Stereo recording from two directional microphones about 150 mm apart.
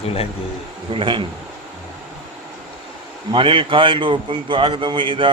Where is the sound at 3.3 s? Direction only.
35° right (ahead or behind).